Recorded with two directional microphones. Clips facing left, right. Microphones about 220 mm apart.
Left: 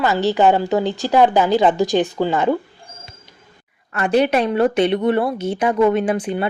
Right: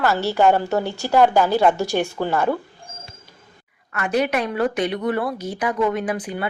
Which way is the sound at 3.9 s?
30° left (ahead or behind).